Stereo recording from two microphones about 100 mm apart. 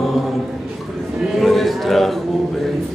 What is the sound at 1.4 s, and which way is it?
Speech, centre (ahead or behind).